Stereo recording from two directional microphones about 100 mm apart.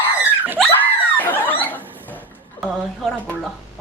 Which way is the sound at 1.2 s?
20° left (ahead or behind).